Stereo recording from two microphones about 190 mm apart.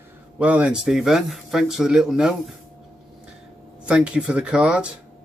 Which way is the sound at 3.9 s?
5° right (ahead or behind).